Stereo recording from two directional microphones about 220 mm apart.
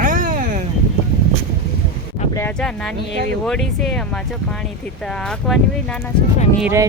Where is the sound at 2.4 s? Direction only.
10° left (ahead or behind).